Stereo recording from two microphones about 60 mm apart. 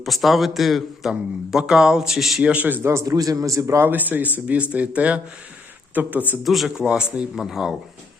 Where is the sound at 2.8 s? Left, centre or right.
Right.